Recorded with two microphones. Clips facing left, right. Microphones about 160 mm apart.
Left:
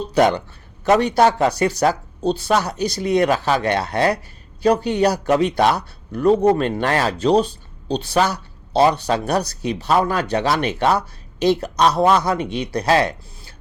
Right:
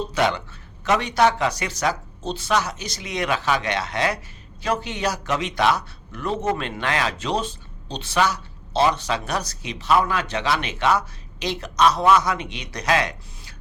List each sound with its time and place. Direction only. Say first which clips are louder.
0.1 s a man's voice: left 10 dB; 40° left (ahead or behind)